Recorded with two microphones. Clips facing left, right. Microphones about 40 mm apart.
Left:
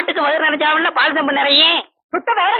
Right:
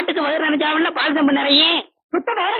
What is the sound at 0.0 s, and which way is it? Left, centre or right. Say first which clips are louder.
A man's voice: left 3 dB; centre.